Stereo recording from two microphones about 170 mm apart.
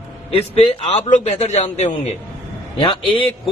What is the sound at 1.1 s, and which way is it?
Speech, 40° left (ahead or behind).